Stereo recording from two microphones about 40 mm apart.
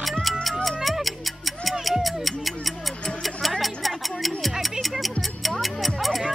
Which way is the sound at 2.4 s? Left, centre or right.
Centre.